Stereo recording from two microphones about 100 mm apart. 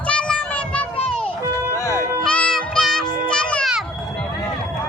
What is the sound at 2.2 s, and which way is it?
Music, 10° left (ahead or behind).